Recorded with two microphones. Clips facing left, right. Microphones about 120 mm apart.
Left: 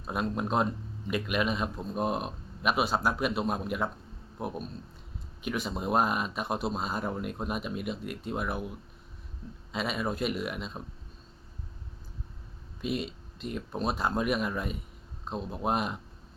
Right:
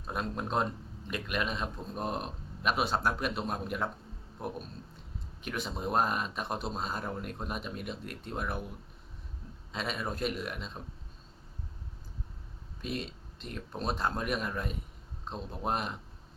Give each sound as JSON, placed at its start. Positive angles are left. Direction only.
{"t": 0.1, "sound": "a man's voice", "side_deg": 10}
{"t": 9.7, "sound": "a man's voice", "side_deg": 5}
{"t": 12.8, "sound": "a man's voice", "side_deg": 5}